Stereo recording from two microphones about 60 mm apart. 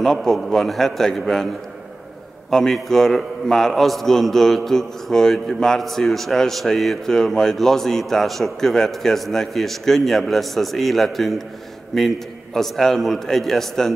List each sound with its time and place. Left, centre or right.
0.0 s a man's voice: centre
2.5 s a man's voice: centre